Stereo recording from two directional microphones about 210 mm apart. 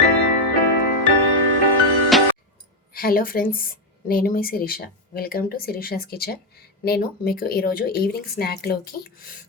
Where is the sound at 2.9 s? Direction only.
45° left (ahead or behind).